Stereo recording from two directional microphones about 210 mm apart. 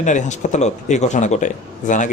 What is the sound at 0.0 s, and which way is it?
Speech, 35° left (ahead or behind).